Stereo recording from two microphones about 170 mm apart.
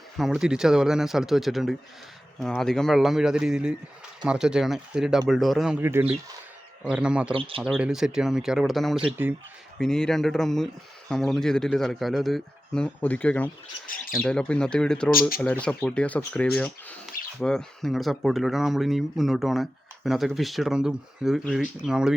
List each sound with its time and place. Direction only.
0.2 s speech: centre (ahead or behind)
5.8 s speech: 15° right (ahead or behind)
7.3 s speech: 30° right (ahead or behind)
7.6 s speech: 5° right (ahead or behind)
9.7 s speech: 5° left (ahead or behind)